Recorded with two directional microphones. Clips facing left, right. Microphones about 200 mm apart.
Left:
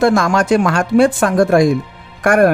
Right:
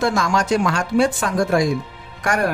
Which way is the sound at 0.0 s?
55° left (ahead or behind).